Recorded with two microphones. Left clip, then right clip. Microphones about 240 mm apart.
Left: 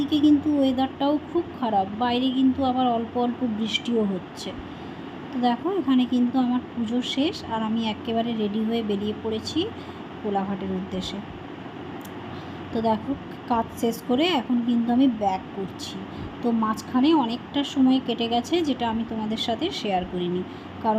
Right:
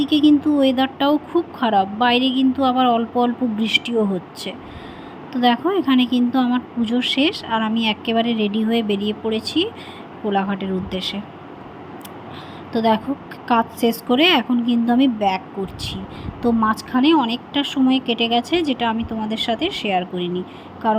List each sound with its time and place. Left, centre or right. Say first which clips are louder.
0.0 s a woman's voice: right 5 dB; centre
5.3 s a woman's voice: right 7 dB; centre
10.9 s a woman's voice: right 7 dB; centre
12.7 s a woman's voice: right 6 dB; centre
16.4 s a woman's voice: right 7 dB; centre